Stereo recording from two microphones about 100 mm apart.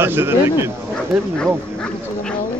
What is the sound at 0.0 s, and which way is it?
Speech, 25° right (ahead or behind).